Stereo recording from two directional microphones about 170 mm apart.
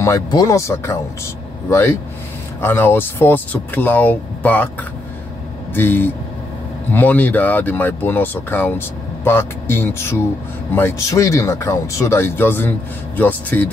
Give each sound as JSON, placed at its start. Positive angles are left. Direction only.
{"t": 0.0, "sound": "speech", "side_deg": 20}
{"t": 5.8, "sound": "speech", "side_deg": 10}